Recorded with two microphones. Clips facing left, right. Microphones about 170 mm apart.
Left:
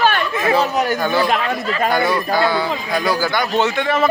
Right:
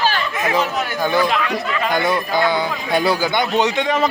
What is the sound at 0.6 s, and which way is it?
Speech, 40° left (ahead or behind).